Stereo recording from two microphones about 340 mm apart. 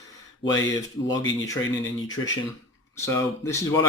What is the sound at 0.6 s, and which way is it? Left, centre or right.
Speech, left.